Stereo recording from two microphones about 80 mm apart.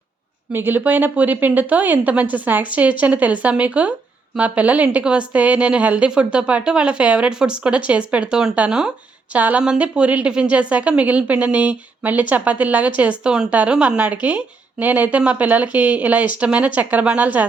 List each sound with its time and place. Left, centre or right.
0.5 s a woman's voice: right